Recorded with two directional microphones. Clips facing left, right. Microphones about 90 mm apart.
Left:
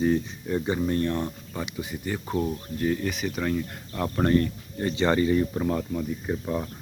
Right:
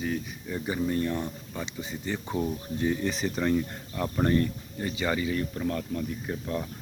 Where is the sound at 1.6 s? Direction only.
15° left (ahead or behind).